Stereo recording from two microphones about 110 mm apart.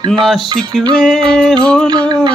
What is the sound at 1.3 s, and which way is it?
Mantra, 5° left (ahead or behind).